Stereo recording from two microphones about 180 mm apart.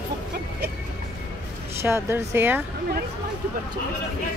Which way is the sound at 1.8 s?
15° right (ahead or behind).